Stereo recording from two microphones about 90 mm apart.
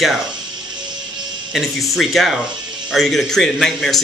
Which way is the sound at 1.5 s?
Centre (ahead or behind).